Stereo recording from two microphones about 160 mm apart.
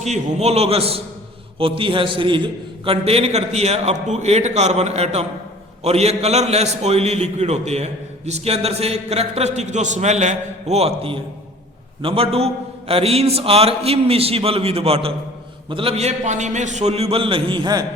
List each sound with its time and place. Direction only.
0.0 s a man's voice: 45° right (ahead or behind); by 17.8 s 25° right (ahead or behind)